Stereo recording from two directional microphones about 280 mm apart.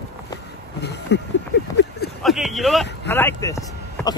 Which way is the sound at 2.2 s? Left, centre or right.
Centre.